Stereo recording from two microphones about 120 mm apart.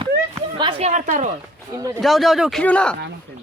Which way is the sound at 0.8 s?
85° right.